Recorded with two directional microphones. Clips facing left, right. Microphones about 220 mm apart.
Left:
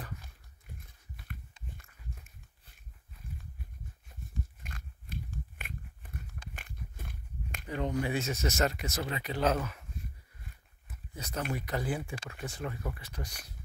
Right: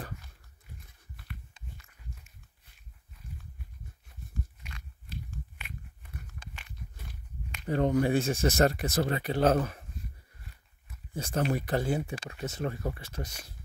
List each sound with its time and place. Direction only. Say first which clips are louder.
4.6 s pig: left 1 dB; 50° left (ahead or behind)
6.5 s a sound: left 1 dB; 50° left (ahead or behind)
7.6 s speech: right 7 dB; 45° right (ahead or behind)
8.3 s speech: right 6 dB; 30° right (ahead or behind)
9.0 s speech: right 5 dB; 50° right (ahead or behind)
11.3 s speech: right 6 dB; 35° right (ahead or behind)
12.6 s speech: right 5 dB; 40° right (ahead or behind)
13.1 s speech: right 4 dB; 25° right (ahead or behind)